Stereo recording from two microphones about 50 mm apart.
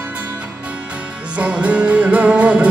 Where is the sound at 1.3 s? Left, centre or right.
Right.